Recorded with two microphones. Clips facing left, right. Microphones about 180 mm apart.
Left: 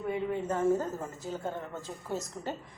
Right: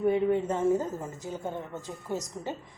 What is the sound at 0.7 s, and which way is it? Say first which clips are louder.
A woman's voice: right 2 dB; 20° right (ahead or behind).